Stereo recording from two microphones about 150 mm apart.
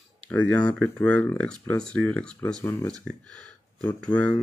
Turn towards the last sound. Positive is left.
turn(degrees=10)  # may be behind; listen again after turning